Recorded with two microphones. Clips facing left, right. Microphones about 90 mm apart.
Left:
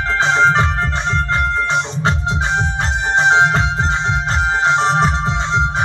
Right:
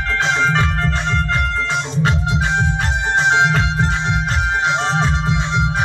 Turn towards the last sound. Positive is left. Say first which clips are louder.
# left 2 dB
turn(degrees=30)  # may be behind; listen again after turning